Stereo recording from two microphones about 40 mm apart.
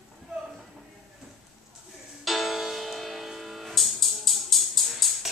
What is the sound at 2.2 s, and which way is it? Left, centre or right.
Music, centre.